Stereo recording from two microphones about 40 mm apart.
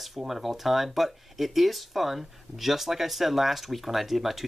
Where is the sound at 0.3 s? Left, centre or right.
Centre.